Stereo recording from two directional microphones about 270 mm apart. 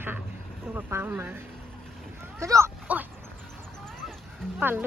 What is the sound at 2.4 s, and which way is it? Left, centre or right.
Speech, centre.